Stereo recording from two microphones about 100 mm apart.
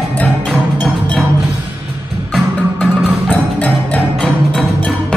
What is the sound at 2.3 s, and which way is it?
Music, centre (ahead or behind).